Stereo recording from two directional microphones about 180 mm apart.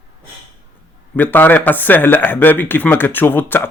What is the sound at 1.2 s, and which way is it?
Speech, 10° left (ahead or behind).